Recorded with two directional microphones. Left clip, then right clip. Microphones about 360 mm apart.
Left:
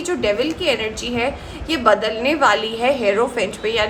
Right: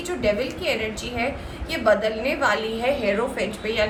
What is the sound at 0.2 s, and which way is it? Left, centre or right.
A woman's voice, centre.